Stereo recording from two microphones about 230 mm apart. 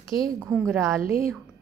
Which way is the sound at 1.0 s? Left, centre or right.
Right.